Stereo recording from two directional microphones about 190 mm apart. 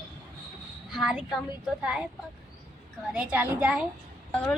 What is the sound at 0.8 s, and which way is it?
A woman's voice, centre (ahead or behind).